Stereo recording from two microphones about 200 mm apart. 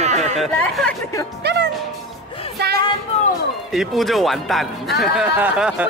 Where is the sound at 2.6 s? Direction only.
55° right (ahead or behind).